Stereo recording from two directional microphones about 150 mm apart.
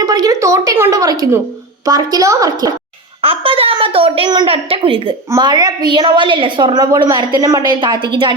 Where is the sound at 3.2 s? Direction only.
40° right (ahead or behind).